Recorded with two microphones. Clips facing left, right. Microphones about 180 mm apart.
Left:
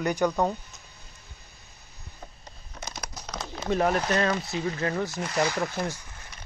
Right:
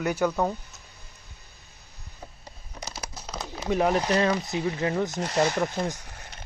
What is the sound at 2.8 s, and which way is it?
Speech, 5° right (ahead or behind).